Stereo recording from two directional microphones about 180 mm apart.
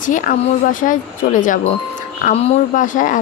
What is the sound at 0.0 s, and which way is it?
A woman's voice, 45° left (ahead or behind).